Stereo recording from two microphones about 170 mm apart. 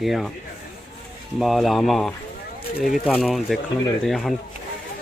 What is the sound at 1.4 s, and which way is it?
Speech, centre (ahead or behind).